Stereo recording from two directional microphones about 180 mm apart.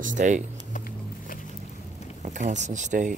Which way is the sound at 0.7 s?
50° left (ahead or behind).